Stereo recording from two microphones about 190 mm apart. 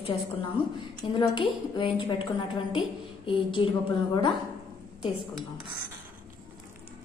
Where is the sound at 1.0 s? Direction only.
25° left (ahead or behind).